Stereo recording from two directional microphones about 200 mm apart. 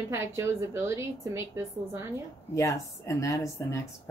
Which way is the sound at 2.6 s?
15° left (ahead or behind).